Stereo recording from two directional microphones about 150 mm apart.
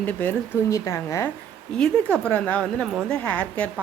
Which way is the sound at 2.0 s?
15° right (ahead or behind).